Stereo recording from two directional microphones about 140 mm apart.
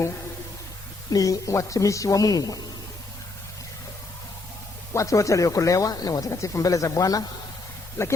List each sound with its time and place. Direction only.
1.1 s speech: 25° left (ahead or behind)
4.9 s speech: 20° left (ahead or behind)